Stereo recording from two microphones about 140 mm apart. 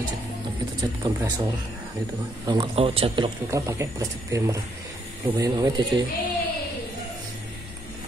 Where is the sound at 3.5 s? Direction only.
20° right (ahead or behind).